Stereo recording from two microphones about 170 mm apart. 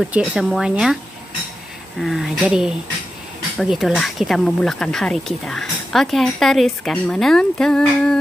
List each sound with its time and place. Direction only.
0.0 s speech: 5° right (ahead or behind)
2.0 s speech: centre (ahead or behind)